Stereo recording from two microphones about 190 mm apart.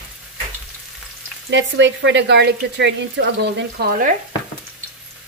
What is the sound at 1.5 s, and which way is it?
Speech, 75° right (ahead or behind).